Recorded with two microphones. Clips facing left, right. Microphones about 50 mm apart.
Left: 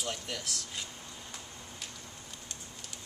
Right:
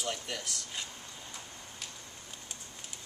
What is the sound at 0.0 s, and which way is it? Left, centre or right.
Speech, centre.